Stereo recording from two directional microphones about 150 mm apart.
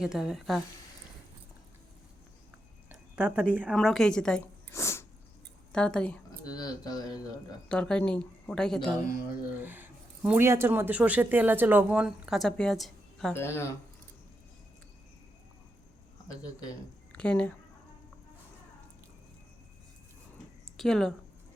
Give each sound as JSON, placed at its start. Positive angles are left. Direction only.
{"t": 0.0, "sound": "speech", "side_deg": -5}
{"t": 3.2, "sound": "speech", "side_deg": -10}
{"t": 3.8, "sound": "speech", "side_deg": 5}
{"t": 4.7, "sound": "sneeze", "side_deg": 20}
{"t": 5.7, "sound": "speech", "side_deg": 5}
{"t": 6.4, "sound": "speech", "side_deg": 25}
{"t": 7.7, "sound": "speech", "side_deg": 5}
{"t": 9.6, "sound": "speech", "side_deg": -10}
{"t": 13.3, "sound": "speech", "side_deg": 15}
{"t": 17.1, "sound": "speech", "side_deg": 5}
{"t": 20.7, "sound": "a woman's voice", "side_deg": 5}